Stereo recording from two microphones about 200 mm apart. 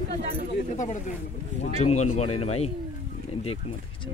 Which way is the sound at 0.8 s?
40° left (ahead or behind).